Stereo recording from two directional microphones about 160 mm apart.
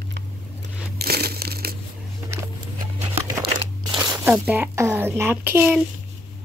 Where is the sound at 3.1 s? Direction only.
25° right (ahead or behind).